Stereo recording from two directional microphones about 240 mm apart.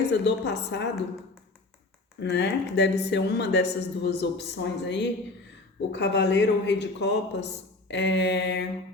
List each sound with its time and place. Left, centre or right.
0.1 s speech: left
2.2 s speech: left